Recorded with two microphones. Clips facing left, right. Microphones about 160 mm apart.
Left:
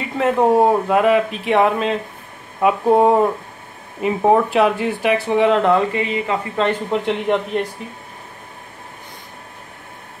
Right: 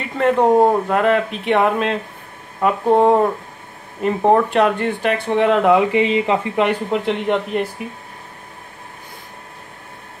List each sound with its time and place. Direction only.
0.0 s speech: centre (ahead or behind)
5.9 s speech: 20° right (ahead or behind)
6.9 s speech: centre (ahead or behind)